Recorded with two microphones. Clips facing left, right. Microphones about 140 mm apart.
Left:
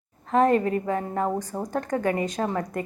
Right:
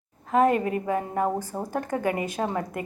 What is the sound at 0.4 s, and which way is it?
A woman's voice, 15° right (ahead or behind).